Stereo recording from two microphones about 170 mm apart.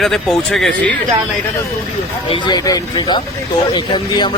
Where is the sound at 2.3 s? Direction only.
25° left (ahead or behind).